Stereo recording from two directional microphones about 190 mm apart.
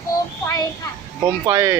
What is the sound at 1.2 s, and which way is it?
Speech, 15° right (ahead or behind).